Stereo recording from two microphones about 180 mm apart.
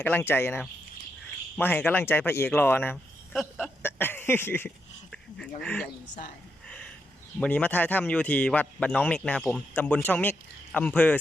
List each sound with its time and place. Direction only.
0.0 s speech: 10° left (ahead or behind)
3.6 s a sound: 10° left (ahead or behind)
5.1 s speech: 5° left (ahead or behind)
5.8 s speech: 50° left (ahead or behind)
7.3 s speech: 5° left (ahead or behind)